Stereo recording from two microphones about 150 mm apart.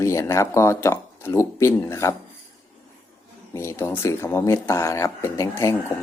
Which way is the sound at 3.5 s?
15° left (ahead or behind).